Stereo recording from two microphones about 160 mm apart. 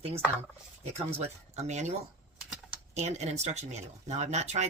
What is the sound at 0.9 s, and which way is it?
Speech, 40° right (ahead or behind).